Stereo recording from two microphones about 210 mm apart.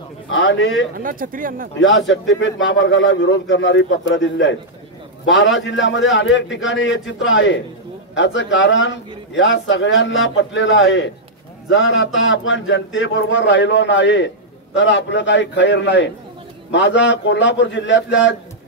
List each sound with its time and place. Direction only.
0.3 s a man's voice: 60° left (ahead or behind)
0.9 s speech: 40° right (ahead or behind)
1.8 s a man's voice: 65° left (ahead or behind)